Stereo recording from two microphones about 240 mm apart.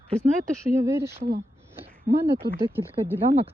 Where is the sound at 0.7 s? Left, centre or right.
Centre.